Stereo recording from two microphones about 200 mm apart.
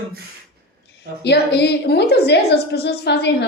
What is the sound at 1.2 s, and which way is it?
A woman's voice, 55° left (ahead or behind).